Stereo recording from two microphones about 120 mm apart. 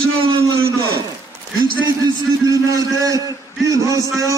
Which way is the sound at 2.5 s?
30° right (ahead or behind).